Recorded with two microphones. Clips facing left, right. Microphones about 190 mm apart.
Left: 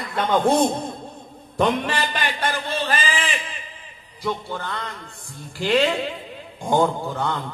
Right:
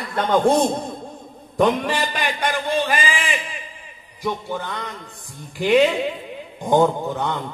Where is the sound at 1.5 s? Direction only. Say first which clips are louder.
Right 3 dB; 15° right (ahead or behind).